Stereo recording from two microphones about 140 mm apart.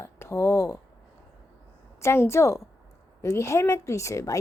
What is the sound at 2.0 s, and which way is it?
A woman's voice, 20° left (ahead or behind).